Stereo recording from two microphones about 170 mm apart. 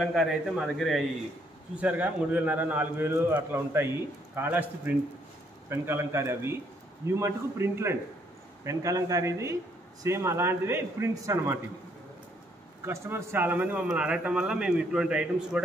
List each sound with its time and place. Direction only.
0.0 s a man's voice: centre (ahead or behind)
12.8 s a man's voice: 15° right (ahead or behind)